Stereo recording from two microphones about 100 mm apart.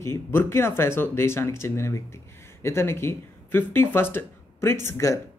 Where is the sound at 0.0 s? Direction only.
25° left (ahead or behind).